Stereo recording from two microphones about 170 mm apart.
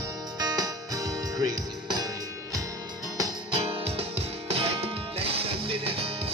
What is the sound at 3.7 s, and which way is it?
Music, 35° right (ahead or behind).